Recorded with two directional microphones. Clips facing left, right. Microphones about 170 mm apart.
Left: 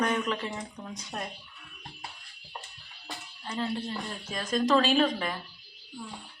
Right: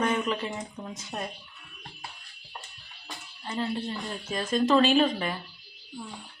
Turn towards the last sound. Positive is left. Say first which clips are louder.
# right 2 dB
turn(degrees=-5)  # may be behind; listen again after turning